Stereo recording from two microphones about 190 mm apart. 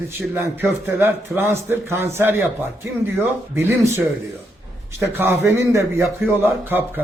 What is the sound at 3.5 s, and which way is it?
Speech, 15° right (ahead or behind).